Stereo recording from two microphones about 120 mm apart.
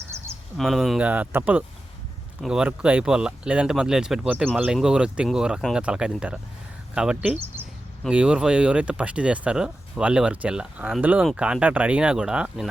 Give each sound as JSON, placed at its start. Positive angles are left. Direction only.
{"t": 0.1, "sound": "a sound", "side_deg": -20}
{"t": 0.5, "sound": "speech", "side_deg": 0}
{"t": 1.0, "sound": "speech", "side_deg": -15}